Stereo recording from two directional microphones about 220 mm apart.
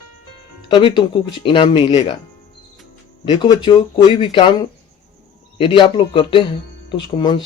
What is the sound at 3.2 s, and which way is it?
Speech, 20° left (ahead or behind).